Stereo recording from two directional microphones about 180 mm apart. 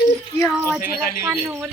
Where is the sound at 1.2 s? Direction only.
10° right (ahead or behind).